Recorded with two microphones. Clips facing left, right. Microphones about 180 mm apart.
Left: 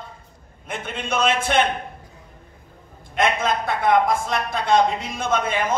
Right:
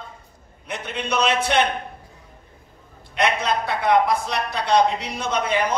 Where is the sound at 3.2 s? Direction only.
50° left (ahead or behind).